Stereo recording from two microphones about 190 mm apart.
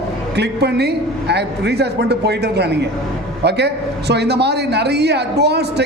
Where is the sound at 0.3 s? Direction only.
60° right (ahead or behind).